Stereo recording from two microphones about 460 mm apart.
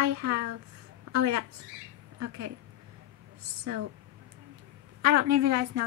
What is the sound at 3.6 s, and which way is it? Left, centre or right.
Speech, right.